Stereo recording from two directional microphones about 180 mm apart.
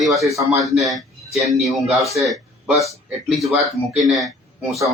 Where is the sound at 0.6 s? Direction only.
Centre (ahead or behind).